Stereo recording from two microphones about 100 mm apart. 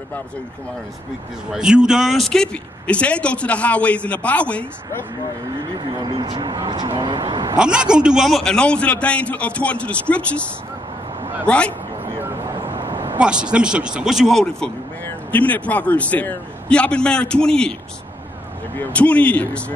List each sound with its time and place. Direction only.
1.5 s speech: 5° right (ahead or behind); by 5.0 s 15° left (ahead or behind)
5.8 s speech: 45° right (ahead or behind)
7.5 s speech: 10° right (ahead or behind); by 10.4 s 10° left (ahead or behind)
11.4 s speech: 10° left (ahead or behind)
12.7 s vehicle: 55° right (ahead or behind)
13.2 s speech: 10° right (ahead or behind)
15.3 s speech: 15° left (ahead or behind)
18.8 s speech: 15° left (ahead or behind)